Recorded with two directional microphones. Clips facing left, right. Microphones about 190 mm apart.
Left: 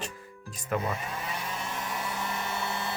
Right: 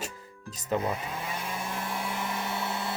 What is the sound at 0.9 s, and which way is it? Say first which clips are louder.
Hair dryer: right 1 dB; 10° right (ahead or behind).